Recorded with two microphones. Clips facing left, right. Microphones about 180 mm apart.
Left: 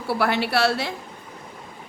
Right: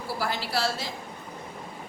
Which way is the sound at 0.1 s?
65° left (ahead or behind).